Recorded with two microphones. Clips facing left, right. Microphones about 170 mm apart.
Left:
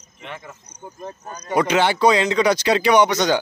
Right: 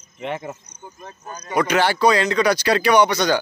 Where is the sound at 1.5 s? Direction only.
20° left (ahead or behind).